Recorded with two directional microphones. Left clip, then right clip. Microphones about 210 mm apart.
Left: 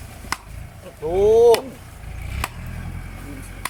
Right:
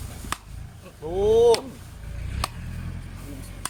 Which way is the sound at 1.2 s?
5° left (ahead or behind).